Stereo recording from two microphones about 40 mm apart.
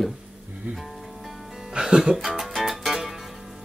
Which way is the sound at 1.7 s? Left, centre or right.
Centre.